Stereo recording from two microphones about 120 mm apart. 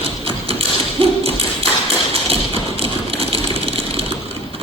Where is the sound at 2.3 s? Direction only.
50° right (ahead or behind).